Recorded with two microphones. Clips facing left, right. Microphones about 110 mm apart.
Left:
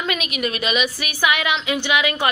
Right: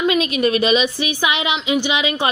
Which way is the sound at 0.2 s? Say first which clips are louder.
Right 8 dB; 30° right (ahead or behind).